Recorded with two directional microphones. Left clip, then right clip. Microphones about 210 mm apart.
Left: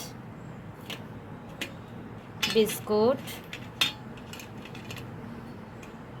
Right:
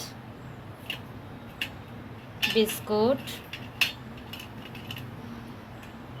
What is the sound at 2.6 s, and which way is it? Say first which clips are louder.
Speech: left 2 dB; 10° left (ahead or behind).